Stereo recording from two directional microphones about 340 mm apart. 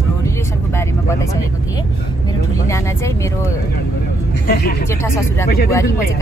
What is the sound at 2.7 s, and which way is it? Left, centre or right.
Speech, centre.